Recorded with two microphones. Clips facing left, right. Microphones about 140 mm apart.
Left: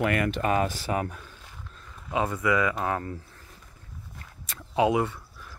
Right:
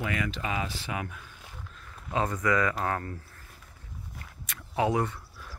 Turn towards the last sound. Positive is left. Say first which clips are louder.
# left 3 dB
turn(degrees=15)  # may be behind; listen again after turning